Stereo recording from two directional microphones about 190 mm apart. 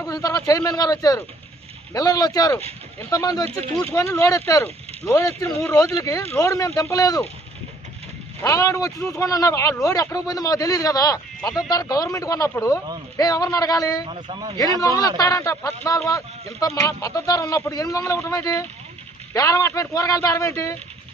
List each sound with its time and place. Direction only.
0.0 s a sound: 20° left (ahead or behind)
0.5 s a man's voice: 20° left (ahead or behind)
8.4 s a man's voice: 15° left (ahead or behind)
14.0 s speech: 30° right (ahead or behind)
14.8 s a man's voice: 15° left (ahead or behind)